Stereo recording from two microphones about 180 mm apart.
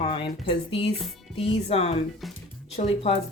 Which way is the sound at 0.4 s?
30° left (ahead or behind).